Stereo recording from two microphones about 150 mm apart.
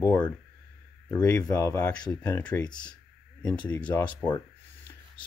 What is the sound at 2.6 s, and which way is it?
Speech, 30° left (ahead or behind).